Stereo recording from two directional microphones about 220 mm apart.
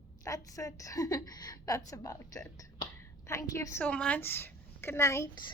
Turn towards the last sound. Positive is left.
turn(degrees=15)  # may be behind; listen again after turning